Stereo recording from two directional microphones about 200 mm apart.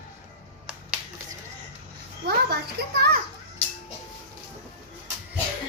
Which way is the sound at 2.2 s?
55° right (ahead or behind).